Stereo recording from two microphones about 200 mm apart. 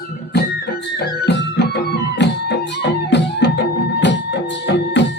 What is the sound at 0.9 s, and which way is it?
Music, 60° left (ahead or behind).